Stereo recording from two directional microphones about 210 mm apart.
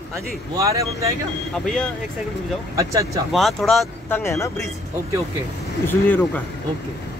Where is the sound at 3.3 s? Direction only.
Centre (ahead or behind).